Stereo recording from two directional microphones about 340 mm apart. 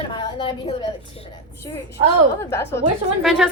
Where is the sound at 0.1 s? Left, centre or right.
Centre.